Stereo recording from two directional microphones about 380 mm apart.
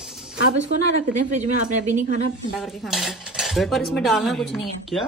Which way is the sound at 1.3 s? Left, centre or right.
Centre.